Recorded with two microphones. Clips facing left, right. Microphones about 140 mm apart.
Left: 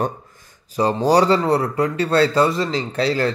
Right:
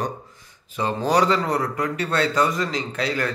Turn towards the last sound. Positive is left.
turn(degrees=30)  # may be behind; listen again after turning